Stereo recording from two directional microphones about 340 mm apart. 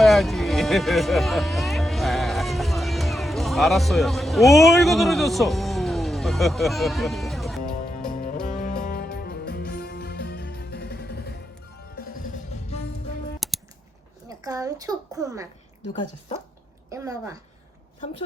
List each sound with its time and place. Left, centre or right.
0.0 s music: centre
7.6 s music: left
12.2 s music: centre
13.4 s a sound: centre
14.3 s a sound: centre
16.9 s a woman's voice: centre